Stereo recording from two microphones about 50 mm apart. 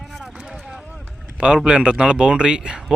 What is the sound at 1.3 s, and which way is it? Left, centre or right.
Speech, centre.